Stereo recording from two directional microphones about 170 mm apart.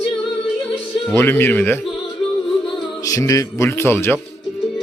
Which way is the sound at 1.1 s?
15° left (ahead or behind).